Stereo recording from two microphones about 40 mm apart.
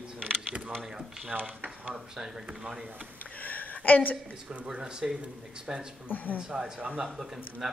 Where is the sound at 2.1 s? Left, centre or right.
Centre.